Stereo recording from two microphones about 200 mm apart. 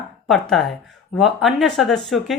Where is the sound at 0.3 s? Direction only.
Centre (ahead or behind).